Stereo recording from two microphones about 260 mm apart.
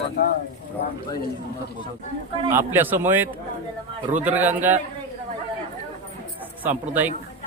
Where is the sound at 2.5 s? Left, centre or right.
Centre.